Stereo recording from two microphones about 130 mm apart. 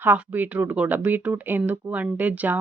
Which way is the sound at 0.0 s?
15° right (ahead or behind).